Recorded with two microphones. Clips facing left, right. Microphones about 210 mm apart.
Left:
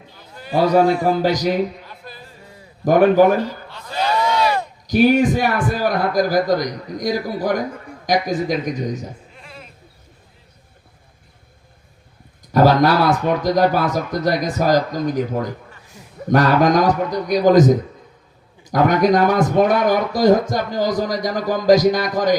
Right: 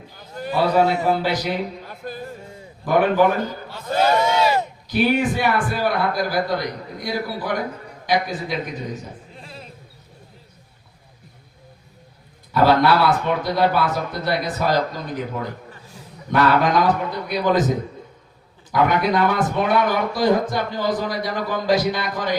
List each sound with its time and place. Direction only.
0.5 s a man's voice: 40° left (ahead or behind)
1.9 s music: 50° right (ahead or behind)
2.4 s a sound: 25° right (ahead or behind)
2.8 s speech: 40° left (ahead or behind)
3.8 s a sound: 50° right (ahead or behind)
4.2 s a sound: 25° right (ahead or behind)
4.9 s a man's voice: 40° left (ahead or behind)
9.3 s sheep: 30° right (ahead or behind)
12.5 s a man's voice: 40° left (ahead or behind)